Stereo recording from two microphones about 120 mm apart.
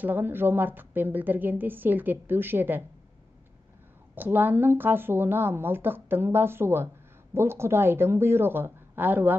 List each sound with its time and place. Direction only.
0.0 s a woman's voice: 15° right (ahead or behind)
4.1 s a woman's voice: 15° right (ahead or behind)